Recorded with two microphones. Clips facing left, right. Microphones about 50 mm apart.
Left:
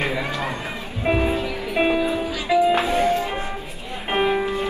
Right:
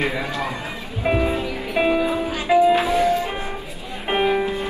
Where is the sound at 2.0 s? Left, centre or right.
Right.